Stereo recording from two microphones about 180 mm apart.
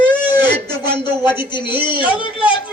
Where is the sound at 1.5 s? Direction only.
25° left (ahead or behind).